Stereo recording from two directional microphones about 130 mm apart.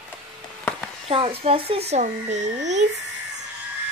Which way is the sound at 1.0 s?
45° right (ahead or behind).